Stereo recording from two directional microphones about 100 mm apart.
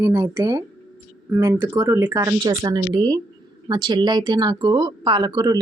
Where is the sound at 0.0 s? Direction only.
25° right (ahead or behind).